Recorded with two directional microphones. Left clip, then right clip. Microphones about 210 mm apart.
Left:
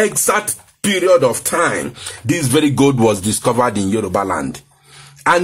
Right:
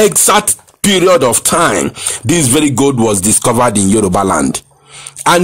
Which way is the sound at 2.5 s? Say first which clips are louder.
Even; 25° right (ahead or behind).